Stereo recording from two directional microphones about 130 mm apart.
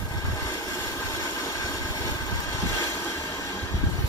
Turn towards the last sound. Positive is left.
turn(degrees=25)  # may be behind; listen again after turning